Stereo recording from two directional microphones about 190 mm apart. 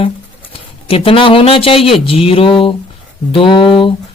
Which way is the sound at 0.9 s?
30° left (ahead or behind).